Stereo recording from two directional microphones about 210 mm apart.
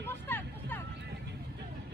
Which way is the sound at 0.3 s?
10° left (ahead or behind).